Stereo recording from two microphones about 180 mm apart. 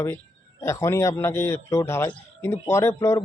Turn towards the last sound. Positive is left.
turn(degrees=15)  # may be behind; listen again after turning